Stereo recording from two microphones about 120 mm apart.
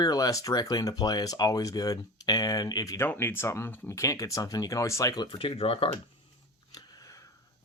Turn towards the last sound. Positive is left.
turn(degrees=30)  # may be behind; listen again after turning